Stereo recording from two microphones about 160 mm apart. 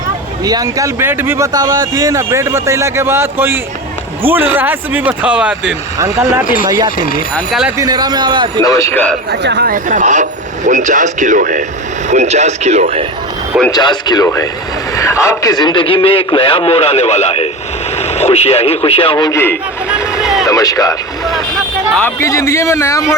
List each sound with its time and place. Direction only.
0.4 s speech: 20° right (ahead or behind)
1.5 s speech: 25° right (ahead or behind); by 5.7 s 5° right (ahead or behind)
6.4 s speech: 60° left (ahead or behind)
6.7 s a man's voice: 25° right (ahead or behind)
7.3 s speech: centre (ahead or behind)
7.8 s a man's voice: 25° right (ahead or behind)
8.6 s a man's voice: 20° left (ahead or behind)
9.3 s speech: 90° right; by 13.1 s 45° right (ahead or behind)
13.7 s a man's voice: 25° left (ahead or behind)
19.9 s a sound: 5° right (ahead or behind)
20.5 s a man's voice: 20° left (ahead or behind)